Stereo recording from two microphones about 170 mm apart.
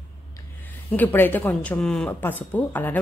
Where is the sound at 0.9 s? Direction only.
10° left (ahead or behind).